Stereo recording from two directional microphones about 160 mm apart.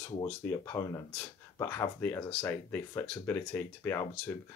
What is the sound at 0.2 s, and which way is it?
Speech, 15° left (ahead or behind).